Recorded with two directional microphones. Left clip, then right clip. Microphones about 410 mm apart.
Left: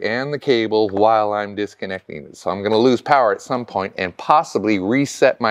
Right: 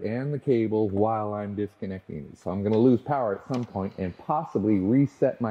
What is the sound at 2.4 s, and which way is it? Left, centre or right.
Speech, centre.